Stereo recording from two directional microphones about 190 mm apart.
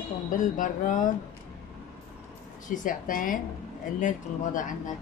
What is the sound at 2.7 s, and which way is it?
A woman's voice, 45° left (ahead or behind).